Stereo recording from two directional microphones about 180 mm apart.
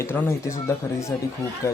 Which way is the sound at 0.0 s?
15° left (ahead or behind).